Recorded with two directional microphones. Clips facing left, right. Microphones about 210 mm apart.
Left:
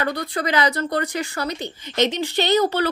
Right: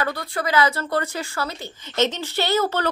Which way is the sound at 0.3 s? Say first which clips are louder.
Right 2 dB; 20° left (ahead or behind).